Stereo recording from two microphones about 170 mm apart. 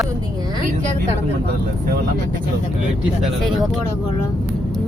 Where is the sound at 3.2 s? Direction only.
Centre (ahead or behind).